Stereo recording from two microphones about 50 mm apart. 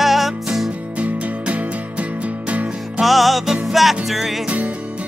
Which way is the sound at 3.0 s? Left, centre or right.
Centre.